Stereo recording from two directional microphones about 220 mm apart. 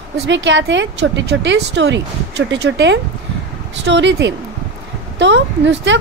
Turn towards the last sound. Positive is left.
turn(degrees=-55)  # may be behind; listen again after turning